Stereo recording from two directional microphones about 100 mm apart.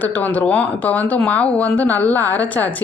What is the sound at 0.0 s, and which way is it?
Speech, 15° left (ahead or behind).